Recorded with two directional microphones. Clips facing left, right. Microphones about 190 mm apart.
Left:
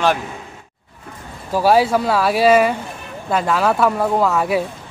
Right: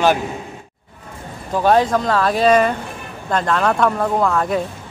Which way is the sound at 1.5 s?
5° left (ahead or behind).